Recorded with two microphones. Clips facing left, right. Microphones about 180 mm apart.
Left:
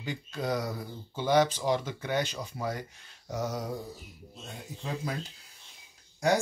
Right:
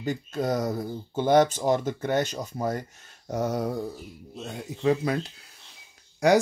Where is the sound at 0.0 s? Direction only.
45° right (ahead or behind).